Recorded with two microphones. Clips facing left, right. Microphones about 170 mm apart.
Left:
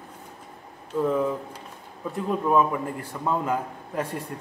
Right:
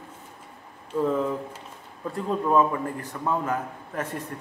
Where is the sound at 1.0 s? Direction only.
Centre (ahead or behind).